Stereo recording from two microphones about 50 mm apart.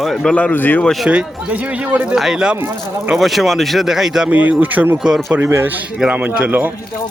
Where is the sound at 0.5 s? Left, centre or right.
Left.